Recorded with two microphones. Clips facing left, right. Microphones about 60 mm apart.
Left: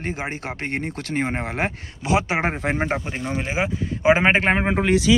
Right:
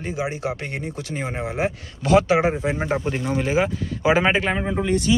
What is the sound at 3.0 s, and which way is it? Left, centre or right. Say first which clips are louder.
Speech: right 4 dB; centre.